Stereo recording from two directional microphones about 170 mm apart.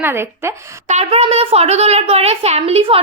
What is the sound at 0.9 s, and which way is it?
A woman's voice, 40° right (ahead or behind).